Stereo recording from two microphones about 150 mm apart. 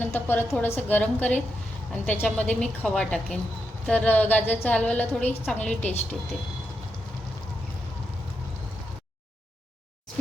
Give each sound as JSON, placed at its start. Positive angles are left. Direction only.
{"t": 0.0, "sound": "a woman's voice", "side_deg": 10}